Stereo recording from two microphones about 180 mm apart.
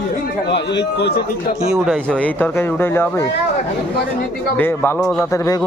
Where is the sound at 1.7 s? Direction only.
5° left (ahead or behind).